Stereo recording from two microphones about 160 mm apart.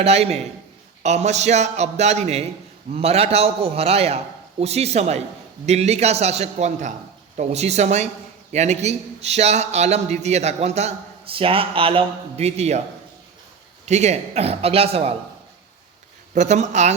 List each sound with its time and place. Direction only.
0.0 s a man's voice: 40° right (ahead or behind)
13.8 s a man's voice: 45° right (ahead or behind)
16.3 s a man's voice: 45° right (ahead or behind)